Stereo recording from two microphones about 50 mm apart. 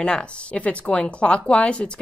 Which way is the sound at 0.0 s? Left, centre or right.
Left.